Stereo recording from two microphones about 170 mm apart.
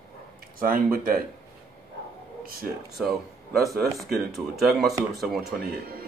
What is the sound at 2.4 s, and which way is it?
Speech, 60° right (ahead or behind).